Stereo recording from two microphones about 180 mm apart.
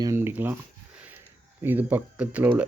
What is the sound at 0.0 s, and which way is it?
Speech, 15° right (ahead or behind).